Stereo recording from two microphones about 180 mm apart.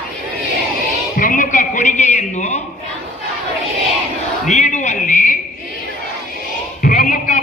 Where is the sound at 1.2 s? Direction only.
50° left (ahead or behind).